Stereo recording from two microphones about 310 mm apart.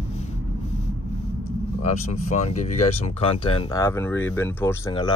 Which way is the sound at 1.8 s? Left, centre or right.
Left.